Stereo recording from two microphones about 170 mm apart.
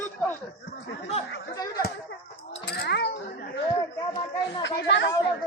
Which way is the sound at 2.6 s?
75° left (ahead or behind).